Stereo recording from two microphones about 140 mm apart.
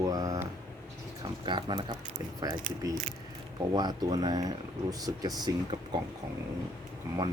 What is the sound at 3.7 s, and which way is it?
Speech, 30° right (ahead or behind).